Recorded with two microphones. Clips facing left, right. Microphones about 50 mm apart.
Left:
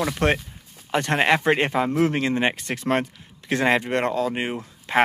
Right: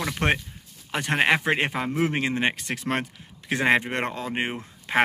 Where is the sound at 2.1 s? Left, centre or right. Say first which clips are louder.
Left 3 dB; centre.